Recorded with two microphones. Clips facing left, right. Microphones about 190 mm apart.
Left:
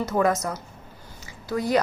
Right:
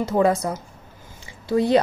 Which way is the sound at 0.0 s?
30° right (ahead or behind).